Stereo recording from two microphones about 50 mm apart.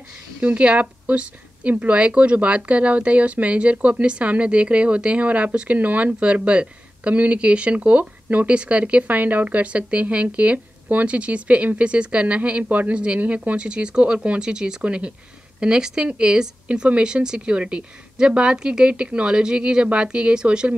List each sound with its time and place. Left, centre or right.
0.4 s speech: right
13.7 s speech: centre